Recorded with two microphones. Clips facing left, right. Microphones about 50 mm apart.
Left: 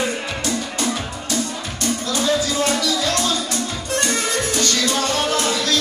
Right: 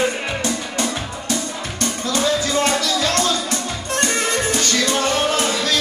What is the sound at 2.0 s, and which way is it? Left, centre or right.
Music, right.